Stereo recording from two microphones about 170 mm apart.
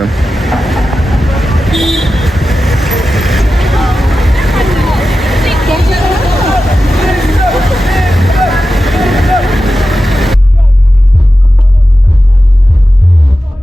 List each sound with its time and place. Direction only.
0.0 s vehicle: centre (ahead or behind)